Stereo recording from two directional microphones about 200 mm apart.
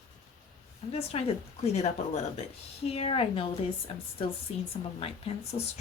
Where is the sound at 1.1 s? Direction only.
30° left (ahead or behind).